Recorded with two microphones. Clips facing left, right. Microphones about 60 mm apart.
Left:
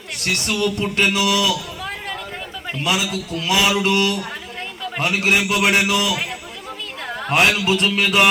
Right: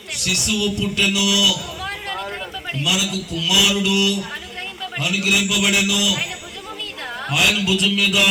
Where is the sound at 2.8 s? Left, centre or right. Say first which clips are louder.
Left 2 dB; left.